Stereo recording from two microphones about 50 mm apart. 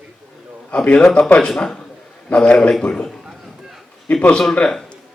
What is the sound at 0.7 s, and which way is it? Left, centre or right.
A man's voice, left.